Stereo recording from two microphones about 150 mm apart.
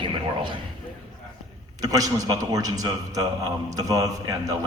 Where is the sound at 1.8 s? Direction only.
25° right (ahead or behind).